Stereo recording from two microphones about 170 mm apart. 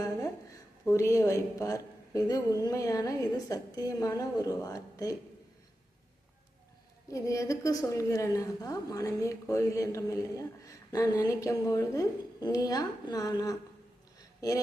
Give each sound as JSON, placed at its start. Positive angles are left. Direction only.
{"t": 0.9, "sound": "a woman's voice", "side_deg": 15}
{"t": 7.1, "sound": "a woman's voice", "side_deg": 20}
{"t": 14.2, "sound": "a sound", "side_deg": 20}